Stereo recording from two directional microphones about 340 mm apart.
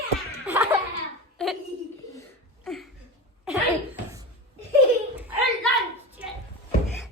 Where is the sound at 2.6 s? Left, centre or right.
Centre.